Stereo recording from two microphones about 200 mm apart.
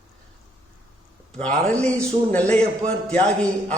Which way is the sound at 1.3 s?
5° left (ahead or behind).